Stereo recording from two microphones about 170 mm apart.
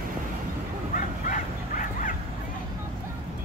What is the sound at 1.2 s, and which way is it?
Bow-wow, 50° left (ahead or behind).